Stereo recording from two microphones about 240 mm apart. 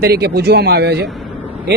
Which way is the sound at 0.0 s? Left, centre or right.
Right.